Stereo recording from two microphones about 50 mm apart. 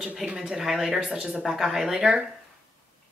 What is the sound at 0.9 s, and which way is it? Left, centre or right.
Speech, centre.